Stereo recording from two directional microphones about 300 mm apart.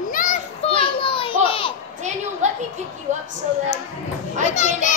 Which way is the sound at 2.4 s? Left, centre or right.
Right.